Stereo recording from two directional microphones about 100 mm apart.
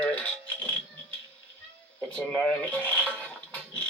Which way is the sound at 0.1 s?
15° left (ahead or behind).